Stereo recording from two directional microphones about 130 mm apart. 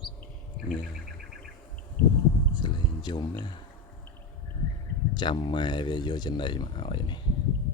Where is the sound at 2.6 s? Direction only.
35° left (ahead or behind).